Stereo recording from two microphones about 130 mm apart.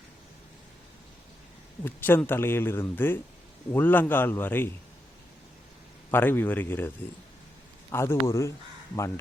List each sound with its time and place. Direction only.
1.8 s speech: 15° left (ahead or behind)
6.1 s speech: 15° left (ahead or behind)